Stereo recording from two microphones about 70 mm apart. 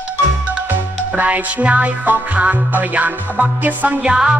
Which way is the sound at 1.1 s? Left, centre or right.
Right.